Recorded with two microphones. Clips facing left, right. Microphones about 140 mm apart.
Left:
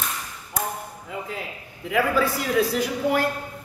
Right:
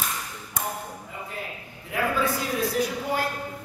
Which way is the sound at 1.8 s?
90° left.